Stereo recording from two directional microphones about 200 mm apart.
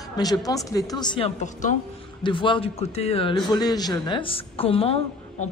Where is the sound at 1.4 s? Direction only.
40° left (ahead or behind).